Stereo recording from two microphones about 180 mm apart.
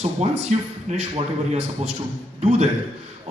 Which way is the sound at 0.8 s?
40° right (ahead or behind).